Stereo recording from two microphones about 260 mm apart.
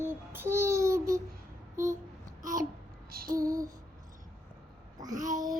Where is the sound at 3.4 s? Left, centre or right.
Centre.